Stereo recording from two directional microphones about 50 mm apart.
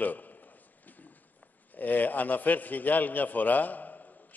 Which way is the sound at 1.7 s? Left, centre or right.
Left.